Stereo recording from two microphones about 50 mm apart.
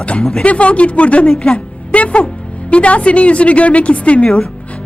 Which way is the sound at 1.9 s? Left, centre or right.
Left.